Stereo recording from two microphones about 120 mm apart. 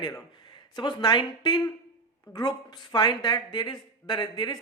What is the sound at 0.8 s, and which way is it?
Speech, 40° left (ahead or behind).